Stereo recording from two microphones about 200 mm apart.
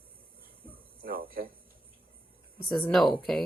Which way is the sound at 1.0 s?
45° right (ahead or behind).